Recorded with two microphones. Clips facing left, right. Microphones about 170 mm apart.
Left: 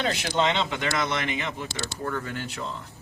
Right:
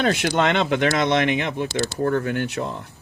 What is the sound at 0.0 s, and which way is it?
Speech, 60° right (ahead or behind).